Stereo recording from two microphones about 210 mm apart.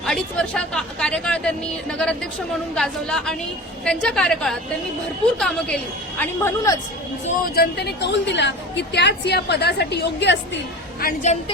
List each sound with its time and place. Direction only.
0.0 s speech: 5° left (ahead or behind)
7.5 s a woman's voice: 50° left (ahead or behind)
11.0 s a woman's voice: 35° left (ahead or behind)